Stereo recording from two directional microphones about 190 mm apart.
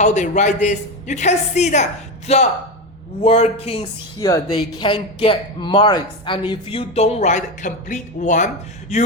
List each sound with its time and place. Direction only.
0.0 s a woman's voice: 40° left (ahead or behind)
4.2 s a woman's voice: 20° left (ahead or behind); by 9.1 s 35° left (ahead or behind)